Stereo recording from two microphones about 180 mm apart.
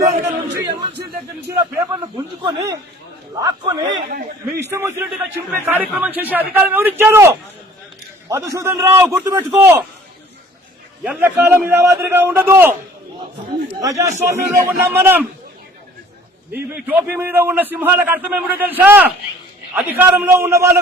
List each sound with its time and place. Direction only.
0.2 s crowd: 20° right (ahead or behind)
1.5 s a sound: 20° right (ahead or behind)
3.4 s a man's voice: 20° right (ahead or behind)
4.1 s a man's voice: 60° right (ahead or behind)
4.7 s a man's voice: 15° right (ahead or behind)
11.0 s a man's voice: 10° right (ahead or behind)
13.8 s a man's voice: 15° right (ahead or behind)
16.5 s a man's voice: 10° right (ahead or behind)